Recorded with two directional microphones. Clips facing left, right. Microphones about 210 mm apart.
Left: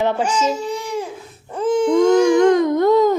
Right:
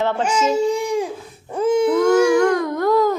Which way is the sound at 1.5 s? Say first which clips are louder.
Right 1 dB; 10° right (ahead or behind).